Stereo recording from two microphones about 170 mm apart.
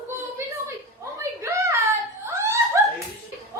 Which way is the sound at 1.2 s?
15° right (ahead or behind).